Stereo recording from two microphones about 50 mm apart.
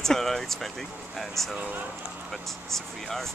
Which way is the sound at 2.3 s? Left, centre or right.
Centre.